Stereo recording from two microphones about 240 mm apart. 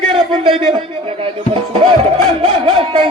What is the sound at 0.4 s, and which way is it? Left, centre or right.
Speech, right.